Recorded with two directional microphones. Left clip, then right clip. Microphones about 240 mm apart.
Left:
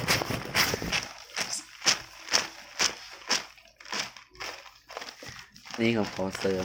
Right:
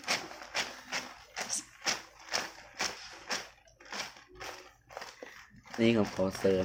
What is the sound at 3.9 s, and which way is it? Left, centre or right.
Crumpling, left.